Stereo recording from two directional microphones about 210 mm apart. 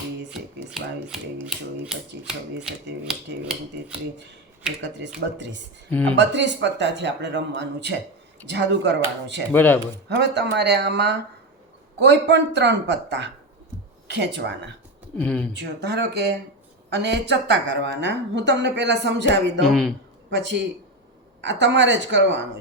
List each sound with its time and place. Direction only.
0.7 s speech: centre (ahead or behind)
5.9 s speech: 5° left (ahead or behind)
6.1 s a woman's voice: 55° right (ahead or behind)
9.5 s speech: 10° left (ahead or behind)
10.2 s a woman's voice: 55° right (ahead or behind)
15.2 s speech: 5° left (ahead or behind)
15.5 s a woman's voice: 55° right (ahead or behind)
19.6 s speech: centre (ahead or behind)
21.4 s a woman's voice: 55° right (ahead or behind)